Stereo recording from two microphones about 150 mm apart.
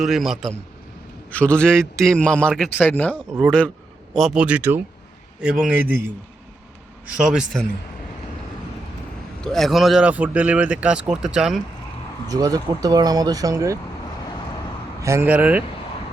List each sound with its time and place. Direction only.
0.0 s a man's voice: centre (ahead or behind)
4.1 s speech: centre (ahead or behind)
7.1 s speech: 5° right (ahead or behind)
9.4 s speech: 5° left (ahead or behind)
12.3 s speech: 25° right (ahead or behind)
15.0 s speech: 15° right (ahead or behind)